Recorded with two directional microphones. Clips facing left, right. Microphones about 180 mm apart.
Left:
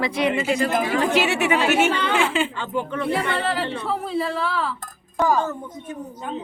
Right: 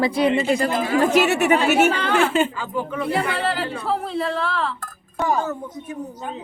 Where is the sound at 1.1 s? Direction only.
45° right (ahead or behind).